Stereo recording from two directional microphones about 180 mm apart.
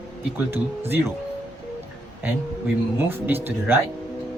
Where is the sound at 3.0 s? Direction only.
10° right (ahead or behind).